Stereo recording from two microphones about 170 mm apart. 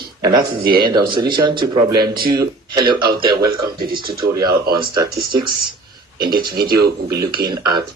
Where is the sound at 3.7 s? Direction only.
60° right (ahead or behind).